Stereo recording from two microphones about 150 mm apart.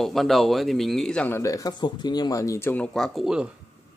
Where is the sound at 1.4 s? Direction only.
20° left (ahead or behind).